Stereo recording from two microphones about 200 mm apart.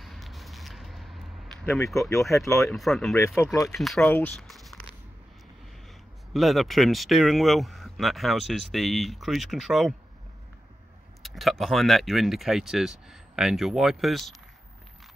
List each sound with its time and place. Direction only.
0.0 s a sound: centre (ahead or behind)
2.4 s speech: centre (ahead or behind)
3.5 s speech: 15° left (ahead or behind)
3.8 s speech: 5° left (ahead or behind)
6.3 s speech: centre (ahead or behind)
11.2 s speech: centre (ahead or behind)